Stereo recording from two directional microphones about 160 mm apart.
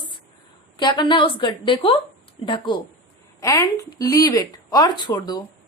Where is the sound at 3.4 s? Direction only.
20° left (ahead or behind).